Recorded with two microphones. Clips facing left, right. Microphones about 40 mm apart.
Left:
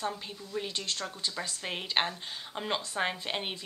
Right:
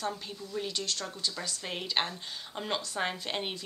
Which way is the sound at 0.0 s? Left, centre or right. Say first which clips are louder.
Even; centre.